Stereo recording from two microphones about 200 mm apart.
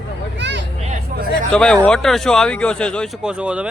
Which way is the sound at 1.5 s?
5° left (ahead or behind).